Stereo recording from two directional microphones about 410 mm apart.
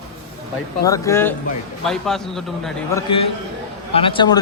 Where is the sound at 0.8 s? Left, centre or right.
Centre.